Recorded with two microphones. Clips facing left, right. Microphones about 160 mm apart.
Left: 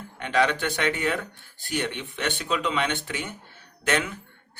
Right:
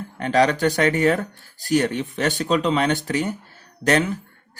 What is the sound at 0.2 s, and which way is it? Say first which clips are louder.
Speech: right 6 dB; 40° right (ahead or behind).